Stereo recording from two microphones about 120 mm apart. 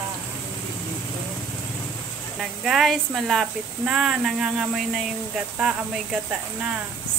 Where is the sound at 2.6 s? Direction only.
Centre (ahead or behind).